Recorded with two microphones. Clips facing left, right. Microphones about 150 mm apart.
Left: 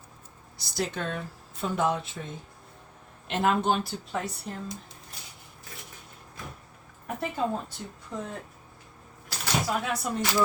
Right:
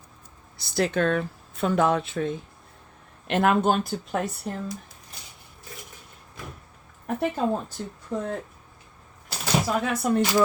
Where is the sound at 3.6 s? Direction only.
55° right (ahead or behind).